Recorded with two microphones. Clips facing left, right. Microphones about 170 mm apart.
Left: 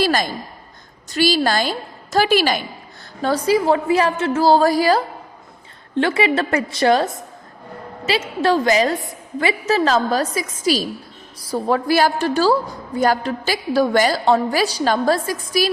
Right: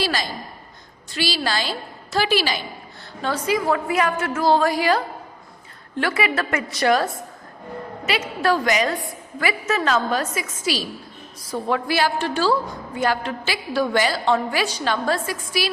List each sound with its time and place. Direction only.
0.0 s a sound: 50° left (ahead or behind)
1.1 s a woman's voice: 45° left (ahead or behind)
3.2 s a woman's voice: 40° left (ahead or behind)